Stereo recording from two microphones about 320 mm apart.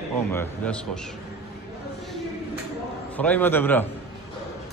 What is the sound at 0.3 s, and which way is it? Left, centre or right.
Speech, centre.